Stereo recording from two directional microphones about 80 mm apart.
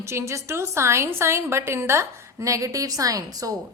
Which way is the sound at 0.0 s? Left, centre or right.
Right.